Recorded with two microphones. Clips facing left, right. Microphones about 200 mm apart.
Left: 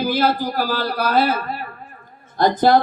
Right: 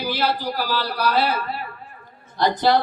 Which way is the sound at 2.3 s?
50° left (ahead or behind).